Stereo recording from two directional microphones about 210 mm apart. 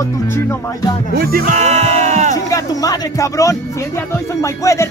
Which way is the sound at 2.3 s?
15° left (ahead or behind).